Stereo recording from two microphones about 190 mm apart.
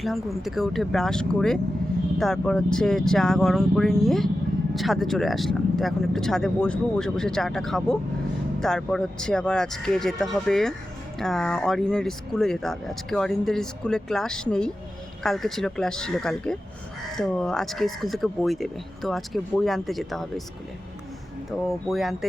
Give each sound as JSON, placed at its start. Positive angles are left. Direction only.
{"t": 0.0, "sound": "speech", "side_deg": 0}
{"t": 21.7, "sound": "speech", "side_deg": 0}